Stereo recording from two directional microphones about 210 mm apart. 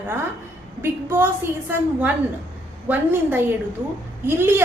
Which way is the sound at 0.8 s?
10° right (ahead or behind).